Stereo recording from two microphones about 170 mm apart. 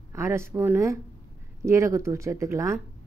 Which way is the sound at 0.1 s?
15° right (ahead or behind).